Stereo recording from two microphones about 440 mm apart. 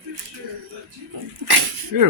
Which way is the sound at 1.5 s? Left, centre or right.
Right.